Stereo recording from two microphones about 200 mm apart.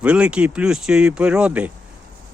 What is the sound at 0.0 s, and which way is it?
Speech, 5° right (ahead or behind).